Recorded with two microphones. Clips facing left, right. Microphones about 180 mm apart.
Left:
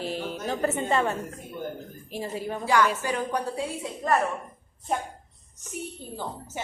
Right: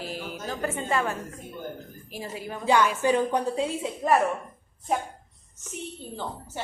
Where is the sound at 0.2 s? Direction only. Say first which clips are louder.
Left 3 dB; 30° left (ahead or behind).